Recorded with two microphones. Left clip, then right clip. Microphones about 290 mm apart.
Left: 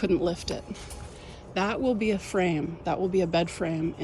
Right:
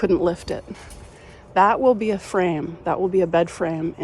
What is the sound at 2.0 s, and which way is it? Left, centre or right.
Speech, centre.